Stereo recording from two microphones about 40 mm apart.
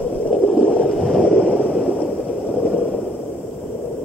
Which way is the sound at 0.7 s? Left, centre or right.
Centre.